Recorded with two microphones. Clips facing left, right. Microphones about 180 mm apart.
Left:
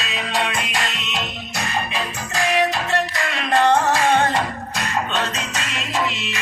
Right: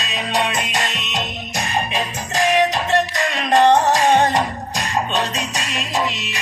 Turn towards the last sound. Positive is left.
turn(degrees=-15)  # may be behind; listen again after turning